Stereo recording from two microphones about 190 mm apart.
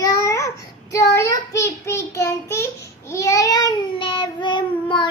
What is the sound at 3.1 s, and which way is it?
A child's voice, 15° left (ahead or behind).